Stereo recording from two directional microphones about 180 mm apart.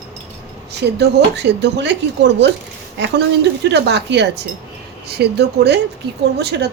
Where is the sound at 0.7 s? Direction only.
70° right (ahead or behind).